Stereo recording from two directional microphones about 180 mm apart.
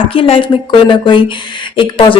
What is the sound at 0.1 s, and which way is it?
A woman's voice, 30° left (ahead or behind).